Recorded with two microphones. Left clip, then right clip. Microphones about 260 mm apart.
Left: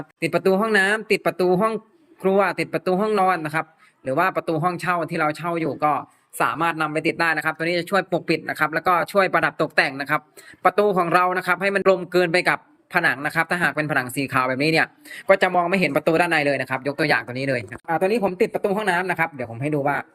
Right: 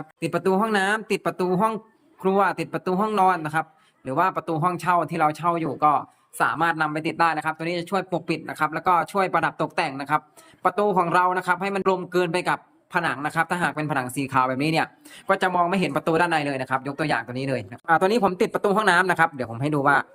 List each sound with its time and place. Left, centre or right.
0.2 s speech: centre
17.8 s speech: right